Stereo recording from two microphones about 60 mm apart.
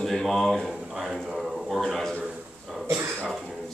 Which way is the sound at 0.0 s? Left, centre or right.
Centre.